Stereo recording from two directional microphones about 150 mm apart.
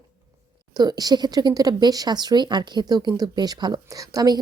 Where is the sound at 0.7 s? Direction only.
25° right (ahead or behind).